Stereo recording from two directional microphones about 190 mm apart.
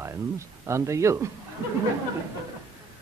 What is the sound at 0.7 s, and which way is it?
Speech, 15° right (ahead or behind).